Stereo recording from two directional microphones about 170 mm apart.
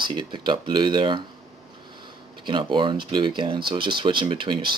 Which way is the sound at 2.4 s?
30° right (ahead or behind).